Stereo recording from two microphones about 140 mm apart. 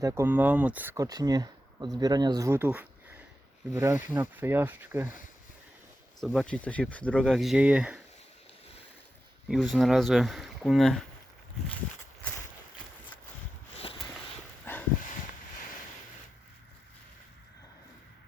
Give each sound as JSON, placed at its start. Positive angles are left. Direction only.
{"t": 0.0, "sound": "speech", "side_deg": -20}
{"t": 0.9, "sound": "speech", "side_deg": -25}
{"t": 2.5, "sound": "a sound", "side_deg": -15}
{"t": 3.8, "sound": "speech", "side_deg": -20}
{"t": 6.1, "sound": "speech", "side_deg": 0}
{"t": 9.7, "sound": "speech", "side_deg": 0}
{"t": 14.6, "sound": "dog", "side_deg": 15}